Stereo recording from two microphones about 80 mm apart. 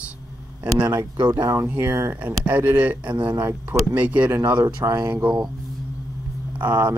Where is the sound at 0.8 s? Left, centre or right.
Right.